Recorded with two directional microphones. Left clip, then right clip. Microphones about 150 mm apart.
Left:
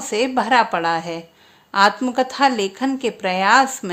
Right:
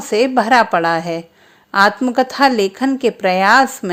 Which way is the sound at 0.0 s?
35° right (ahead or behind).